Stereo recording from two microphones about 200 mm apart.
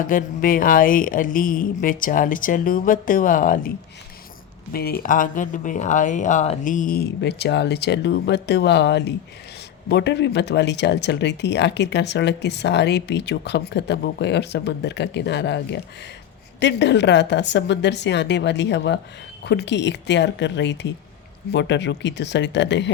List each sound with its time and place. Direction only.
0.0 s speech: 45° left (ahead or behind)
4.7 s speech: 50° left (ahead or behind)